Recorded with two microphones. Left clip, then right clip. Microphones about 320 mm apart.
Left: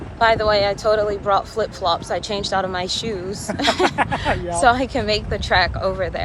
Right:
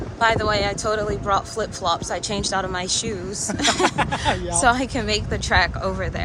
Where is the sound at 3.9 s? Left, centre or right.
Centre.